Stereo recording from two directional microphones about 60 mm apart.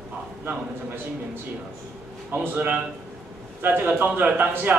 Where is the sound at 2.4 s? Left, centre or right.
Right.